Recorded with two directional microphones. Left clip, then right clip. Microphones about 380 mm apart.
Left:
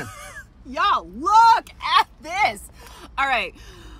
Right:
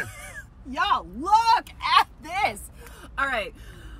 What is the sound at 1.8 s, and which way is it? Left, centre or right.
Speech, centre.